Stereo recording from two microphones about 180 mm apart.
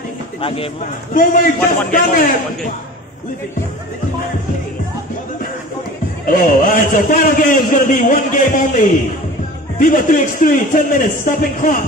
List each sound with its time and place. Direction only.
0.4 s speech: 30° left (ahead or behind)
1.1 s a man's voice: 50° left (ahead or behind)
6.2 s a man's voice: 50° left (ahead or behind)